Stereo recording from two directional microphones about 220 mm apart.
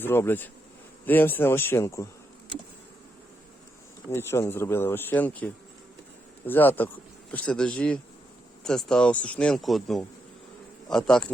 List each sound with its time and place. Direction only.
0.0 s speech: 10° left (ahead or behind)
4.1 s speech: 10° left (ahead or behind)